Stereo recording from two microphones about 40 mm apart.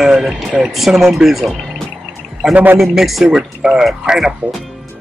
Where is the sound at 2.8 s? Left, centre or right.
Centre.